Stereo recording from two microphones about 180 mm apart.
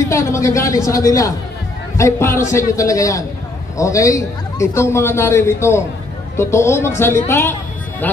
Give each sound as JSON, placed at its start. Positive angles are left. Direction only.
{"t": 0.1, "sound": "a man's voice", "side_deg": 15}